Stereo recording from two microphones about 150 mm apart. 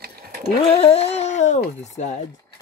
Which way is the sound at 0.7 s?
45° left (ahead or behind).